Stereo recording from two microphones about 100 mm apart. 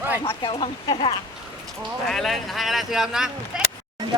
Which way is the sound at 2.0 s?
Centre (ahead or behind).